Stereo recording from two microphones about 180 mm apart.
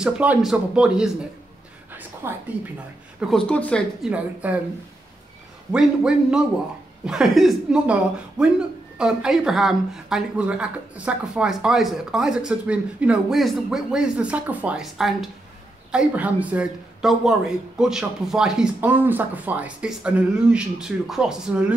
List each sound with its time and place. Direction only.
0.0 s speech: 5° right (ahead or behind)
1.9 s a sound: 10° right (ahead or behind)
3.2 s speech: 5° left (ahead or behind)
4.0 s speech: 5° right (ahead or behind)
5.7 s speech: 5° right (ahead or behind)